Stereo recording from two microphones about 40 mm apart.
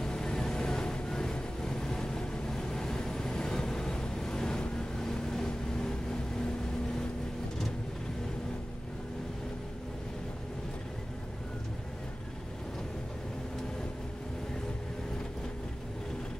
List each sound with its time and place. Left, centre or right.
0.0 s vehicle: centre